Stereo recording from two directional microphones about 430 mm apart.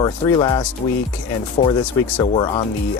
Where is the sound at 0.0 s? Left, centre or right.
Centre.